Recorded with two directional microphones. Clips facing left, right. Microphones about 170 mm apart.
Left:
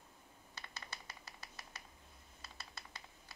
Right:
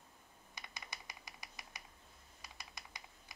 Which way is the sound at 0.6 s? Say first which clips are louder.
Even; 15° right (ahead or behind).